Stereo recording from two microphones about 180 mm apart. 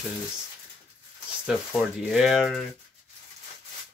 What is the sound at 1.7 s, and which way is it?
Speech, centre (ahead or behind).